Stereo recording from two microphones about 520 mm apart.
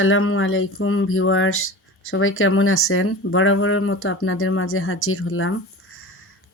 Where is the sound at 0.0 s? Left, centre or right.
Left.